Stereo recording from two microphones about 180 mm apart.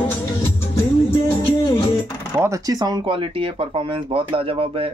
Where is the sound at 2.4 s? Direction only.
15° right (ahead or behind).